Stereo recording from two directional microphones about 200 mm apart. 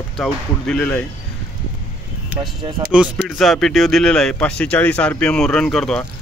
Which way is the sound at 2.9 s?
Centre (ahead or behind).